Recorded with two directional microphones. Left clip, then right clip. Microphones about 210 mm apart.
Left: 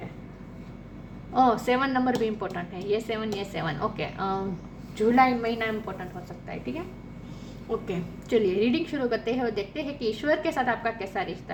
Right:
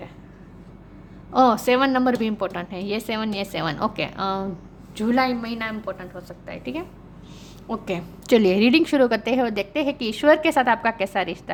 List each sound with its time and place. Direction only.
1.3 s a woman's voice: 55° right (ahead or behind)
4.9 s a woman's voice: 40° right (ahead or behind)
6.5 s a woman's voice: 45° right (ahead or behind)